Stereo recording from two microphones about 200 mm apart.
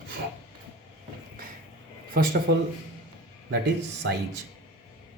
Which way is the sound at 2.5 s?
55° right (ahead or behind).